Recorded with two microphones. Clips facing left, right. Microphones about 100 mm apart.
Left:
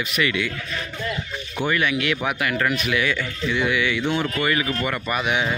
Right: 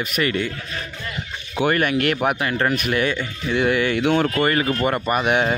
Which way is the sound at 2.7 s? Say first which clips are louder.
Right 2 dB; 45° right (ahead or behind).